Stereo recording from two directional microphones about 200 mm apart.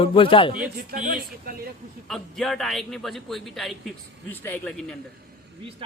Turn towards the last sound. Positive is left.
turn(degrees=5)  # may be behind; listen again after turning